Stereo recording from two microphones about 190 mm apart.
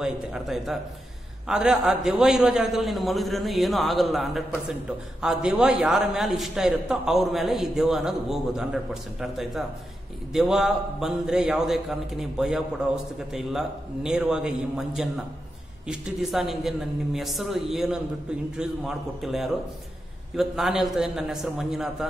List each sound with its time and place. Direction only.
0.0 s a man's voice: centre (ahead or behind)